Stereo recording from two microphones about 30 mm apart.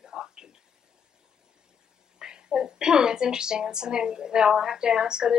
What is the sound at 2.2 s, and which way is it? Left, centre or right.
A woman's voice, right.